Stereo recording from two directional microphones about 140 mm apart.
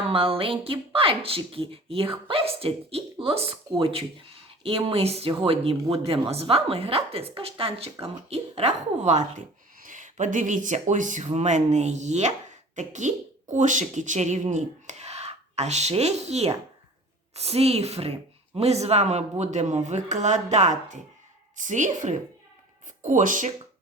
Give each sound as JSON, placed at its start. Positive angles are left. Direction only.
{"t": 0.1, "sound": "speech", "side_deg": -40}
{"t": 9.8, "sound": "speech", "side_deg": -65}